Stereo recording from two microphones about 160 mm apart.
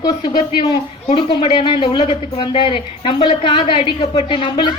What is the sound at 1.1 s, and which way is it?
Speech, 40° left (ahead or behind).